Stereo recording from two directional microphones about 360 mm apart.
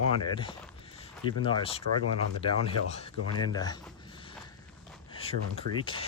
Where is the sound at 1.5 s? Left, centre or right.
Centre.